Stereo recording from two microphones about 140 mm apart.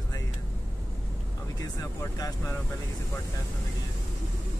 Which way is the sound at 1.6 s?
25° left (ahead or behind).